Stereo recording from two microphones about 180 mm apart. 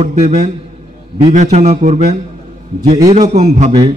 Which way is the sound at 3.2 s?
40° right (ahead or behind).